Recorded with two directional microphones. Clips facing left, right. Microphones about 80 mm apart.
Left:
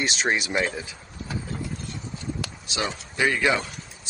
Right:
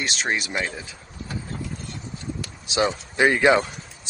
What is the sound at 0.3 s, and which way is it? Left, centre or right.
Speech, centre.